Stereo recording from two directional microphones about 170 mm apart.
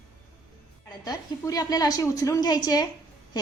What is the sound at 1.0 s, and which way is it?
A woman's voice, 20° left (ahead or behind).